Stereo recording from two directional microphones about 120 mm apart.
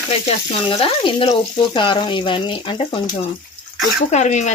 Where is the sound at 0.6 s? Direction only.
45° left (ahead or behind).